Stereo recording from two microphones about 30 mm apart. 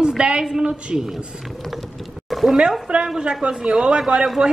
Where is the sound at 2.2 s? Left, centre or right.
Centre.